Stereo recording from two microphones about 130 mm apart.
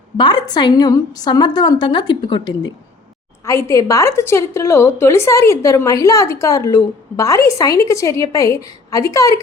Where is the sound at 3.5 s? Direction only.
25° left (ahead or behind).